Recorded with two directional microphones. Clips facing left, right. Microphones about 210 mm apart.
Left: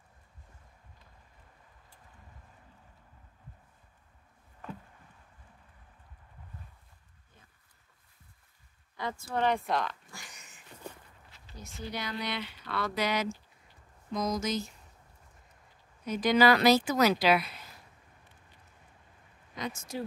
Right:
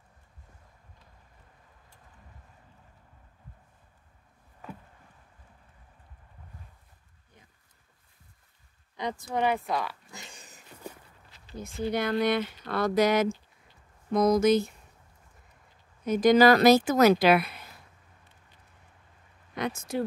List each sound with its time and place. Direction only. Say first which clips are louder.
8.9 s speech: right 3 dB; 20° right (ahead or behind)
10.1 s a sound: right 4 dB; 25° right (ahead or behind)
11.5 s speech: right 10 dB; 55° right (ahead or behind)
14.1 s speech: right 10 dB; 60° right (ahead or behind)
16.1 s speech: right 5 dB; 45° right (ahead or behind)
19.5 s speech: right 6 dB; 60° right (ahead or behind)